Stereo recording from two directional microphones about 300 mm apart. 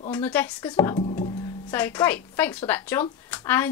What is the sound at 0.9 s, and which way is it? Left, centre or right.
Music, centre.